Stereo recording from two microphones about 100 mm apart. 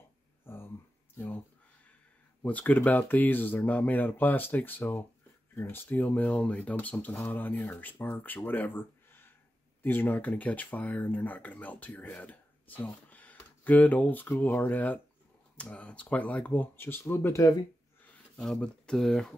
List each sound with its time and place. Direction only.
0.5 s a sound: 25° left (ahead or behind)
1.1 s speech: 20° left (ahead or behind)
2.4 s speech: 15° left (ahead or behind)
18.0 s speech: 10° left (ahead or behind)